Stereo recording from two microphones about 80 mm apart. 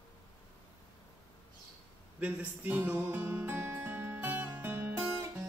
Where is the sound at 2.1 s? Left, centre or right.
Centre.